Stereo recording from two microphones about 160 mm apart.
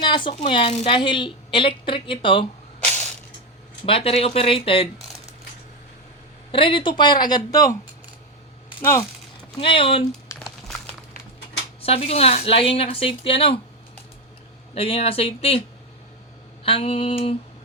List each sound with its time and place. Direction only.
0.0 s a sound: 30° left (ahead or behind)
0.4 s a woman's voice: 35° left (ahead or behind)
3.8 s a woman's voice: 35° left (ahead or behind)
6.5 s speech: 35° left (ahead or behind)
8.8 s speech: 15° left (ahead or behind)
9.6 s a woman's voice: 35° left (ahead or behind)
10.4 s a sound: centre (ahead or behind)
11.8 s a woman's voice: 40° left (ahead or behind)
14.8 s a woman's voice: 35° left (ahead or behind)
16.6 s a woman's voice: 35° left (ahead or behind)